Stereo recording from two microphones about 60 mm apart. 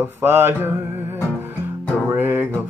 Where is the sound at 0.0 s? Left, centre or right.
Right.